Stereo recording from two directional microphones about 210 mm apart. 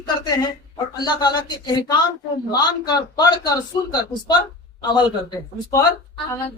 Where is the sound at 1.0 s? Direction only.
20° left (ahead or behind).